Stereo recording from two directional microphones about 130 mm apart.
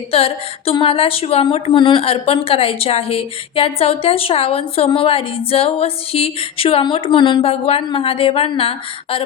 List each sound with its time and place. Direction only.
0.1 s speech: 50° left (ahead or behind)